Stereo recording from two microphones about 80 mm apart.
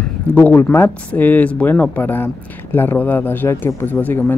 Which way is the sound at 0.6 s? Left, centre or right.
Left.